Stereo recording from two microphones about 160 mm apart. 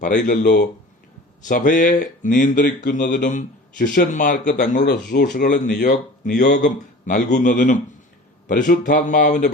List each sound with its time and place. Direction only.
0.0 s a man's voice: 55° left (ahead or behind)
0.4 s speech: 90° left
1.5 s a man's voice: 55° left (ahead or behind)
4.9 s speech: 90° left
5.3 s a man's voice: 50° left (ahead or behind)